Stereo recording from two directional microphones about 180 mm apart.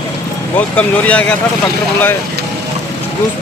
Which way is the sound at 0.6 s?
10° left (ahead or behind).